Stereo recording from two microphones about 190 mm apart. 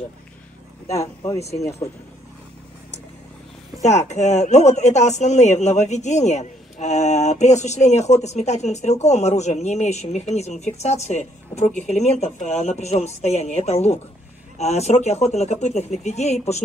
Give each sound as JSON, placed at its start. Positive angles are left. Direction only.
{"t": 0.8, "sound": "speech", "side_deg": 15}
{"t": 3.8, "sound": "a woman's voice", "side_deg": 35}